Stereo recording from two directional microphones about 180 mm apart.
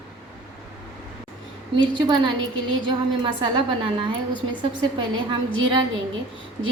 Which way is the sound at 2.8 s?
25° right (ahead or behind).